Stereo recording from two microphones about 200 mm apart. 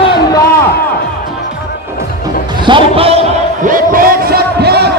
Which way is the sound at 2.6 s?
25° right (ahead or behind).